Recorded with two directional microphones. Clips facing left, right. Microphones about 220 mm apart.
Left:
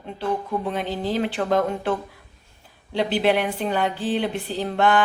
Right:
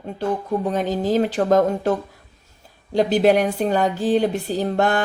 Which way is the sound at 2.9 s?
45° right (ahead or behind).